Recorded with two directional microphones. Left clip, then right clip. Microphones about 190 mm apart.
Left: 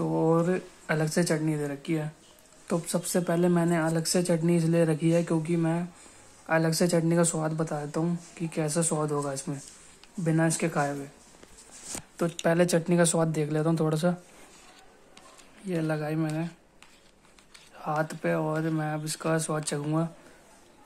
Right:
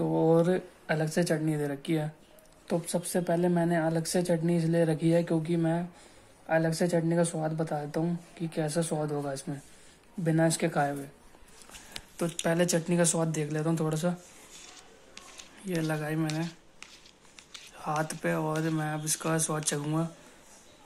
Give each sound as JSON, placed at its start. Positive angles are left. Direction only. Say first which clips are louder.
{"t": 0.0, "sound": "a sound", "louder": "right 1 dB", "side_deg": 5}
{"t": 0.8, "sound": "speech", "louder": "left 2 dB", "side_deg": 15}
{"t": 2.7, "sound": "speech", "louder": "left 2 dB", "side_deg": 15}
{"t": 12.4, "sound": "speech", "louder": "left 3 dB", "side_deg": 10}
{"t": 15.1, "sound": "speech", "louder": "right 4 dB", "side_deg": 10}
{"t": 17.7, "sound": "speech", "louder": "left 2 dB", "side_deg": 5}